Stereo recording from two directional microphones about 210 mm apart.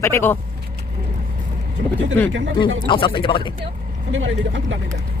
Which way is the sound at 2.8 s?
25° left (ahead or behind).